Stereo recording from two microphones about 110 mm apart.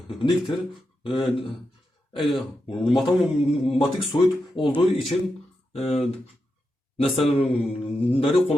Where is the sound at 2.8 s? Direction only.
Centre (ahead or behind).